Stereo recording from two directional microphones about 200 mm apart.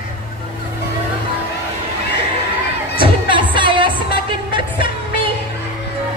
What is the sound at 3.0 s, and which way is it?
Music, 25° right (ahead or behind).